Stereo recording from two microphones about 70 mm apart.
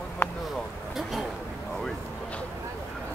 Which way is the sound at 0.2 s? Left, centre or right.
Left.